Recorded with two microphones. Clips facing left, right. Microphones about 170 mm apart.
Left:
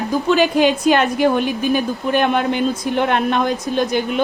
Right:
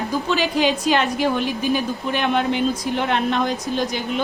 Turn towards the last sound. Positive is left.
turn(degrees=55)  # may be behind; listen again after turning